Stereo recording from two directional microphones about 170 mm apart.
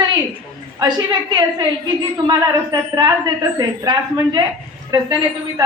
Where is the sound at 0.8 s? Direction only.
25° right (ahead or behind).